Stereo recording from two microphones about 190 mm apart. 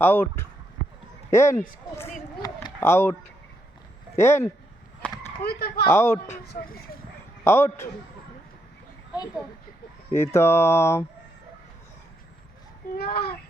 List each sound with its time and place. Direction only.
0.0 s speech: 10° left (ahead or behind)
2.4 s a sound: 15° left (ahead or behind)
4.2 s speech: 15° left (ahead or behind)
5.4 s speech: 55° left (ahead or behind)
5.8 s speech: 15° left (ahead or behind)
7.4 s speech: 15° left (ahead or behind)
10.2 s speech: 15° left (ahead or behind)
13.0 s speech: 55° left (ahead or behind)